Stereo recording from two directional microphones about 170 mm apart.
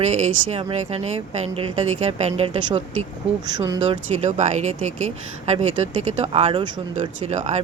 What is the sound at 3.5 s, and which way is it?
Speech, 25° right (ahead or behind).